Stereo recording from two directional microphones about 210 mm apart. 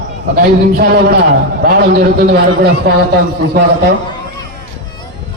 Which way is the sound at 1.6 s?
50° right (ahead or behind).